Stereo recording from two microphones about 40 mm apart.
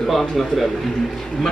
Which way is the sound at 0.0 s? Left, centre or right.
Centre.